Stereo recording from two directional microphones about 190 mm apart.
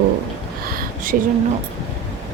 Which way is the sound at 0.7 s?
45° right (ahead or behind).